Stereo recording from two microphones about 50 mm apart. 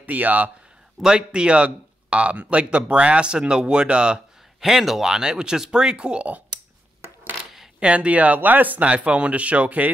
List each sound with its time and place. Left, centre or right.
0.0 s speech: right
1.0 s speech: centre
4.6 s speech: centre; by 6.4 s right
7.8 s speech: right